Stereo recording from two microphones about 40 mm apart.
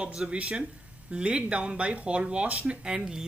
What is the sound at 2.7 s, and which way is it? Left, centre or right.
Speech, centre.